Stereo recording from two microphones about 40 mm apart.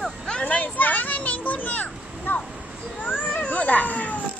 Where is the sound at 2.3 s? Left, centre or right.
Left.